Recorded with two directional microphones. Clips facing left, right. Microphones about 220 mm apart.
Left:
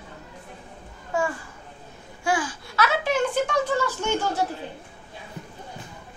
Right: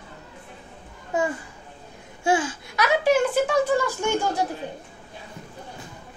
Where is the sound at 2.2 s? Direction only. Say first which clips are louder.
Right 3 dB; 25° right (ahead or behind).